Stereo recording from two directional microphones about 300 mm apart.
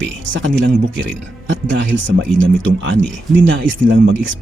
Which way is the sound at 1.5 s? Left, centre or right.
Right.